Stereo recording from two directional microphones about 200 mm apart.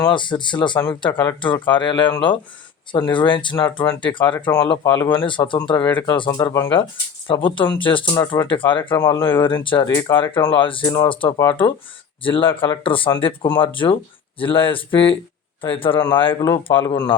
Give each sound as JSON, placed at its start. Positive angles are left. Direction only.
{"t": 0.0, "sound": "speech", "side_deg": 25}
{"t": 3.1, "sound": "speech", "side_deg": 25}
{"t": 5.8, "sound": "speech", "side_deg": 15}
{"t": 9.9, "sound": "speech", "side_deg": 15}
{"t": 10.2, "sound": "speech", "side_deg": 25}
{"t": 16.6, "sound": "speech", "side_deg": 25}